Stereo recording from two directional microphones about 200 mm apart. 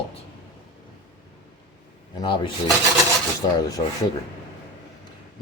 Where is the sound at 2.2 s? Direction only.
25° left (ahead or behind).